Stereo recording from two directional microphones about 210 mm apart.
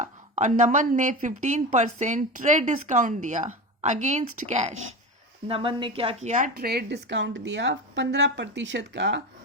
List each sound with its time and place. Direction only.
0.0 s a woman's voice: 35° right (ahead or behind); by 9.2 s 55° right (ahead or behind)